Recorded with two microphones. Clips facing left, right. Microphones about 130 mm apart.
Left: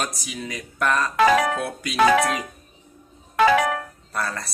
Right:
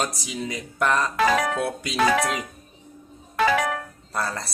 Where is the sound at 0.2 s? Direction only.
25° right (ahead or behind).